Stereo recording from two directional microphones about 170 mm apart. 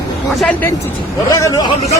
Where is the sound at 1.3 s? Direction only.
20° left (ahead or behind).